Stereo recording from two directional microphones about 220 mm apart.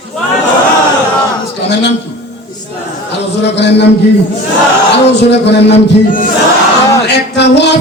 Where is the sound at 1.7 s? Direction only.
50° left (ahead or behind).